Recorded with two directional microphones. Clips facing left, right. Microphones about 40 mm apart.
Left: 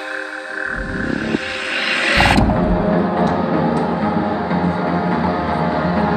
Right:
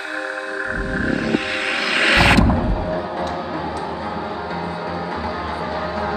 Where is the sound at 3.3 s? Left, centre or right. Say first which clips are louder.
Left 8 dB; left.